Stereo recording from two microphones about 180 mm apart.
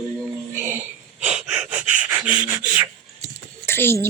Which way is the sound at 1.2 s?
5° right (ahead or behind).